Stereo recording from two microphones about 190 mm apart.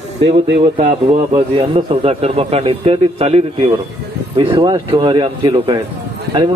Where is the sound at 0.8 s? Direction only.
30° right (ahead or behind).